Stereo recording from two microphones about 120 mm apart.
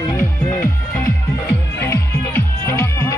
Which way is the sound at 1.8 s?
20° left (ahead or behind).